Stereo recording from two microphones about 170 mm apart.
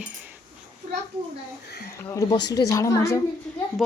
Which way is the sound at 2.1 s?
20° left (ahead or behind).